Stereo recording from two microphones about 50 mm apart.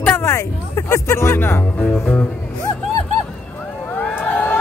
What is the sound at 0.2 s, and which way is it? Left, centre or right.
Speech, left.